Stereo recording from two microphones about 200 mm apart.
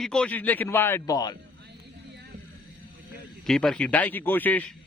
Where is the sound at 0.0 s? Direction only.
5° left (ahead or behind).